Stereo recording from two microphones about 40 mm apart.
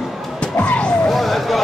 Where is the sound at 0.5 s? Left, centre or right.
Left.